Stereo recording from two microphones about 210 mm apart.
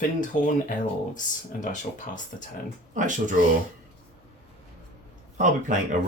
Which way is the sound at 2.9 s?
35° right (ahead or behind).